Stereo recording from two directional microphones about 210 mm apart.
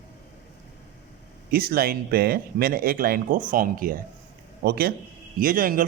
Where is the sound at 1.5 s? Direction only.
45° right (ahead or behind).